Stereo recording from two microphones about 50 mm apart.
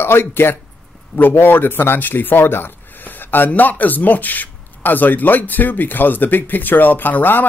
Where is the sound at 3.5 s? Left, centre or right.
Left.